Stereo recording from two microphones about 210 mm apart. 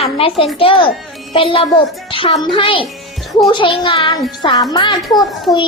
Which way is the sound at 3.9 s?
25° left (ahead or behind).